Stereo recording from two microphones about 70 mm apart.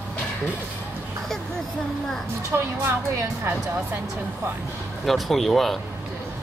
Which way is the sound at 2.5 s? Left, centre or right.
Right.